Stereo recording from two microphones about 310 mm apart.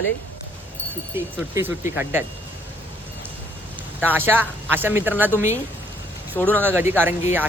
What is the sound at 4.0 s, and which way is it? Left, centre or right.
Speech, centre.